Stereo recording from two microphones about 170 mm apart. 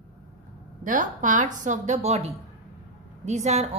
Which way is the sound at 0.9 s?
50° right (ahead or behind).